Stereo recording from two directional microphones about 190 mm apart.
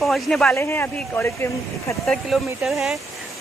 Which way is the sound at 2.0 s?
Centre (ahead or behind).